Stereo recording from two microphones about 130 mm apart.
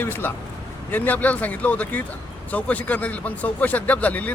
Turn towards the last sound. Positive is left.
turn(degrees=10)  # may be behind; listen again after turning